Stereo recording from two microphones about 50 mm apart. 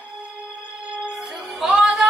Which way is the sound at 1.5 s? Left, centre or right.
Centre.